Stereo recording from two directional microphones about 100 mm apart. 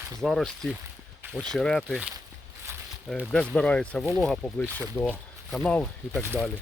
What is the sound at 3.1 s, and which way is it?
Speech, 5° left (ahead or behind).